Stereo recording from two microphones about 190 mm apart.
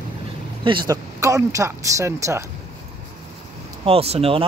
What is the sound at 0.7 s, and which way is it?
Speech, 20° right (ahead or behind).